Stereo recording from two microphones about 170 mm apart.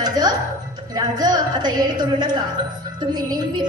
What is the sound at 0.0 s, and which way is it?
Music, 25° right (ahead or behind).